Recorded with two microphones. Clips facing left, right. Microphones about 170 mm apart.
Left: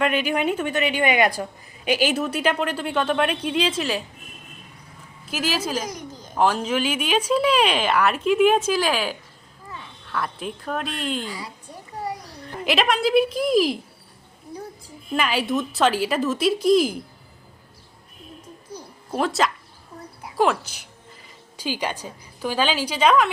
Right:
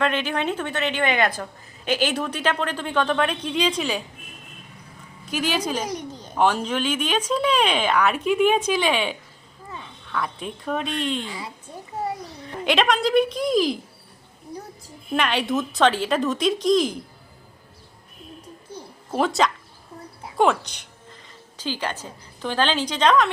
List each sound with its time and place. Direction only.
0.0 s a woman's voice: 10° left (ahead or behind)
5.3 s speech: 5° left (ahead or behind)
11.3 s a child's voice: 25° right (ahead or behind)
12.4 s speech: 5° left (ahead or behind)
15.1 s speech: 5° left (ahead or behind)
19.1 s a woman's voice: centre (ahead or behind)